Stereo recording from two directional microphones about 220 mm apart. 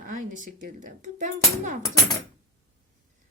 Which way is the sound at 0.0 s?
35° right (ahead or behind).